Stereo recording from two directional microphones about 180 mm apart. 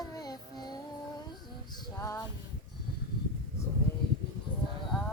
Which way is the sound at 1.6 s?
20° left (ahead or behind).